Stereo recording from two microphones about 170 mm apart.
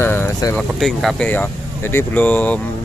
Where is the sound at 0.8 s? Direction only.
Centre (ahead or behind).